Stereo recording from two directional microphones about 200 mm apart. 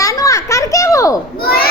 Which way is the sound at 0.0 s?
15° left (ahead or behind).